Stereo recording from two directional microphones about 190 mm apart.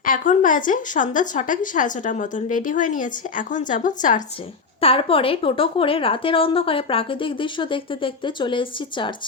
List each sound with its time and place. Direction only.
0.0 s a woman's voice: 45° left (ahead or behind)
4.8 s a woman's voice: 30° left (ahead or behind)